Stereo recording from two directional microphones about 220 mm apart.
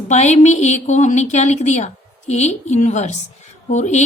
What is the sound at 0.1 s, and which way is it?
A woman's voice, 30° left (ahead or behind).